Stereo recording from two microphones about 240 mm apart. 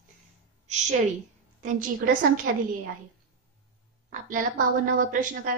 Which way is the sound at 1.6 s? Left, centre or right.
Right.